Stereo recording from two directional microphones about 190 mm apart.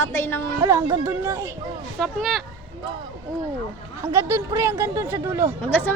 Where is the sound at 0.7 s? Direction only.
15° right (ahead or behind).